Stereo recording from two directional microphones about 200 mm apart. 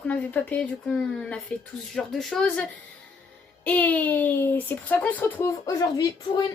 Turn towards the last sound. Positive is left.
turn(degrees=20)  # may be behind; listen again after turning